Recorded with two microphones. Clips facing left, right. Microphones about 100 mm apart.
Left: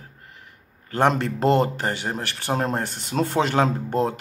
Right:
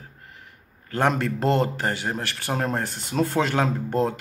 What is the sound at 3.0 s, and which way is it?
Speech, 30° left (ahead or behind).